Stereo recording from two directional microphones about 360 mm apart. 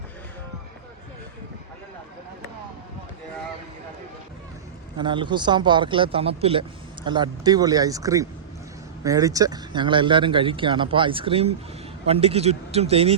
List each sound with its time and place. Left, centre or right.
4.9 s speech: centre